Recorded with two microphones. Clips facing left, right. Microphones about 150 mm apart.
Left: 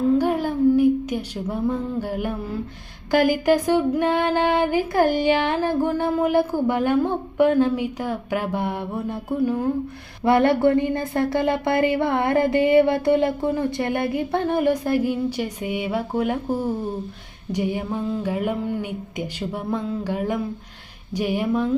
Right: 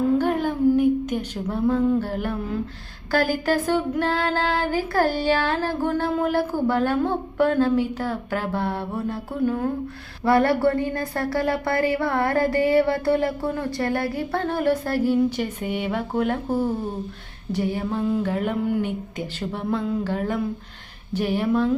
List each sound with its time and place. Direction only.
0.2 s a sound: 10° left (ahead or behind)
3.1 s a woman's voice: 15° left (ahead or behind)
6.3 s a woman's voice: 15° left (ahead or behind)